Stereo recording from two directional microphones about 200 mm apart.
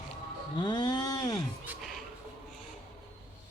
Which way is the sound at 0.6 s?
20° left (ahead or behind).